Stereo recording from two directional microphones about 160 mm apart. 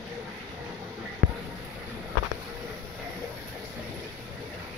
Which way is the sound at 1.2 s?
70° right (ahead or behind).